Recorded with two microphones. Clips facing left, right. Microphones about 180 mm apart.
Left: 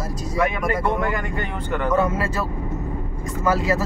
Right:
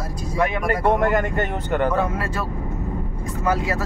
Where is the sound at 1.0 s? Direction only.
45° right (ahead or behind).